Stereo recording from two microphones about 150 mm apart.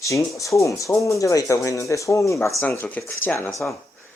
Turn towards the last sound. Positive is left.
turn(degrees=15)  # may be behind; listen again after turning